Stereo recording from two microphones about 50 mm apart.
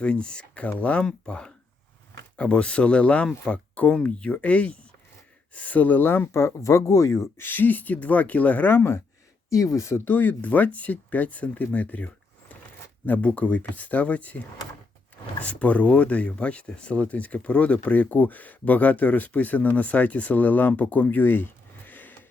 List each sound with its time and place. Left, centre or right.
0.0 s speech: left
1.0 s speech: centre; by 6.1 s left
6.3 s speech: left
7.3 s speech: left
8.7 s speech: left
9.5 s speech: left
10.0 s speech: left